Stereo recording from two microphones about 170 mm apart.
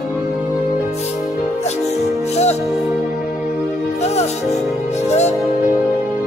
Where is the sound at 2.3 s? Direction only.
40° left (ahead or behind).